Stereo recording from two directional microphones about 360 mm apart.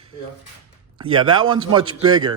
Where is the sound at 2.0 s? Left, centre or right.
Centre.